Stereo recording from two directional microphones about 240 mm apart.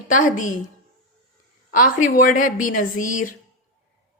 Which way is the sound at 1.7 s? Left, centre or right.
Left.